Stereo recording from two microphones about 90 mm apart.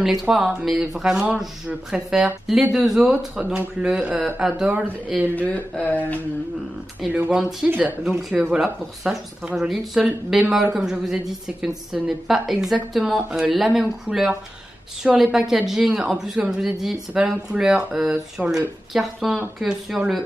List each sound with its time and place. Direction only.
0.0 s a woman's voice: 5° right (ahead or behind)
4.7 s speech: 20° right (ahead or behind)
5.5 s a sound: 15° left (ahead or behind)
7.1 s speech: 15° right (ahead or behind)
8.2 s a woman's voice: 5° right (ahead or behind)